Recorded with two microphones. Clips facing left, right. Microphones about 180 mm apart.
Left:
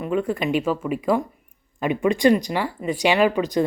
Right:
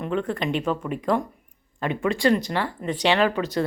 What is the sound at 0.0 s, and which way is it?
Speech, 10° left (ahead or behind).